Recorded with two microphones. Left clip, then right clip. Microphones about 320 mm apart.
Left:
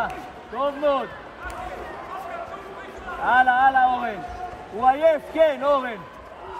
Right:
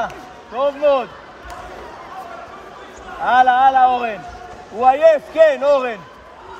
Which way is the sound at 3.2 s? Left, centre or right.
Right.